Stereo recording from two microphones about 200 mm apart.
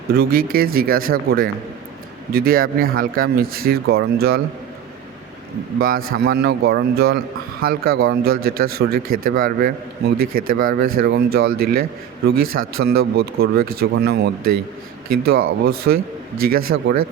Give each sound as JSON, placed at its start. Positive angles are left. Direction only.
{"t": 0.1, "sound": "speech", "side_deg": -50}
{"t": 5.8, "sound": "speech", "side_deg": -45}
{"t": 16.6, "sound": "speech", "side_deg": -90}